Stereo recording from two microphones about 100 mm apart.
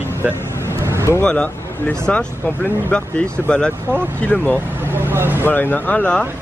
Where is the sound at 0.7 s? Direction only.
30° right (ahead or behind).